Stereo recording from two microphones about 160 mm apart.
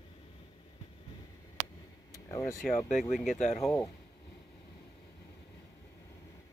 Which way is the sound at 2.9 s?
50° left (ahead or behind).